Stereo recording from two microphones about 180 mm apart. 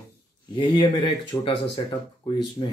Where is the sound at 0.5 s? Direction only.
25° left (ahead or behind).